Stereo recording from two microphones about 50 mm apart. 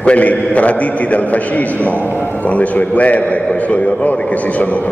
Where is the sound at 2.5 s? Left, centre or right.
Left.